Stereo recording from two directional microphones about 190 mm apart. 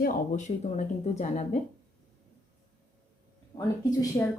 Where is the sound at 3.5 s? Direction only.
20° left (ahead or behind).